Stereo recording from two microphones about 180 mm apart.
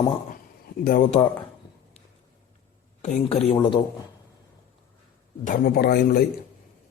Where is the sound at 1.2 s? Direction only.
25° left (ahead or behind).